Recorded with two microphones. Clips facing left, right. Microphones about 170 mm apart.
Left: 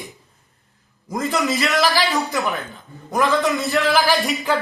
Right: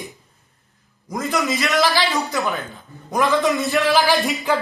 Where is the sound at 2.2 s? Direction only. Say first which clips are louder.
Even; 20° left (ahead or behind).